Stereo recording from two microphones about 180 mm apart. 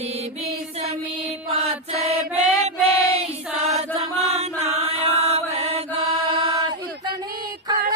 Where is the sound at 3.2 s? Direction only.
35° right (ahead or behind).